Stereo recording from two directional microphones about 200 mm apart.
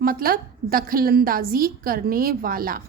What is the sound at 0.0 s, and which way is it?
A woman's voice, 45° right (ahead or behind).